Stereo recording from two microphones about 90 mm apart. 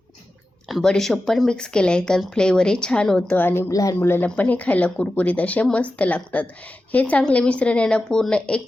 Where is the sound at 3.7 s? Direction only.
40° left (ahead or behind).